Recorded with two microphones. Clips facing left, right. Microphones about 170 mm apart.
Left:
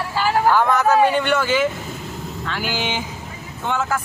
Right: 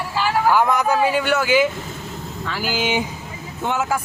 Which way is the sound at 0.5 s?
10° right (ahead or behind).